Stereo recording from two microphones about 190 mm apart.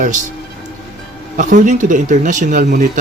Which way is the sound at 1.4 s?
40° right (ahead or behind).